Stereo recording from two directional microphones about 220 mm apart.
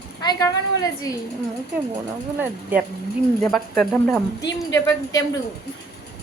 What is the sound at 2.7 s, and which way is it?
Speech, 10° right (ahead or behind).